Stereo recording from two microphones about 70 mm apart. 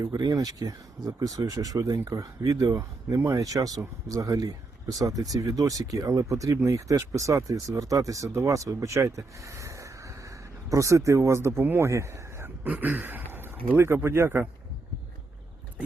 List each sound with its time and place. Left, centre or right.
0.0 s speech: right
12.6 s a man's voice: right